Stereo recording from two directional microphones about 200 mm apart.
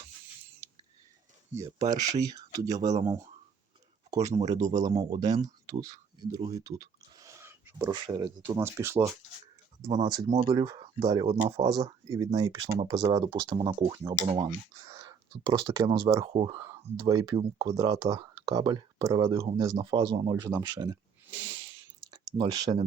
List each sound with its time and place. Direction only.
0.6 s a sound: 15° right (ahead or behind)
2.0 s speech: 20° right (ahead or behind)
4.1 s speech: 15° right (ahead or behind)
7.2 s a sound: 15° right (ahead or behind)
8.4 s speech: 10° right (ahead or behind)
10.2 s speech: 35° right (ahead or behind)
10.5 s speech: 20° right (ahead or behind)